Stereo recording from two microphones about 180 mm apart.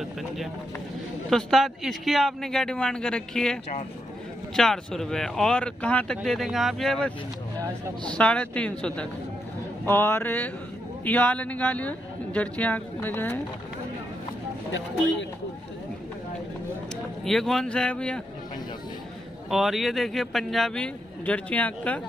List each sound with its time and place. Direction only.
1.3 s speech: centre (ahead or behind)
4.6 s speech: centre (ahead or behind)
8.1 s speech: 5° left (ahead or behind)
16.9 s speech: centre (ahead or behind)
19.5 s speech: centre (ahead or behind)